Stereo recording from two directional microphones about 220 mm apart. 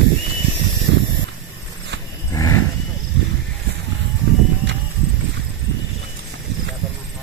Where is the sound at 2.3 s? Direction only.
15° left (ahead or behind).